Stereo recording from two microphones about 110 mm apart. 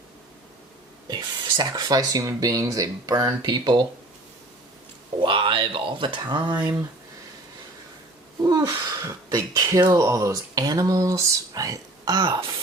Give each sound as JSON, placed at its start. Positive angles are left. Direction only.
{"t": 1.0, "sound": "speech", "side_deg": -40}
{"t": 5.2, "sound": "speech", "side_deg": -50}
{"t": 6.5, "sound": "speech", "side_deg": -15}
{"t": 8.4, "sound": "speech", "side_deg": -35}